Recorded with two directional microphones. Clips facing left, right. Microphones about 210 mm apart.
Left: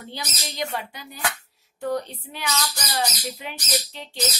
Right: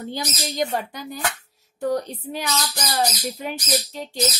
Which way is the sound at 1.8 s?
40° right (ahead or behind).